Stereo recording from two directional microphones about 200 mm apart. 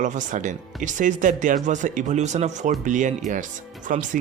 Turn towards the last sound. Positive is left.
turn(degrees=-40)  # may be behind; listen again after turning